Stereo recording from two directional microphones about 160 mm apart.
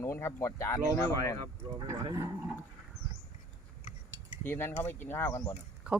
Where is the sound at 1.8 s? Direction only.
25° right (ahead or behind).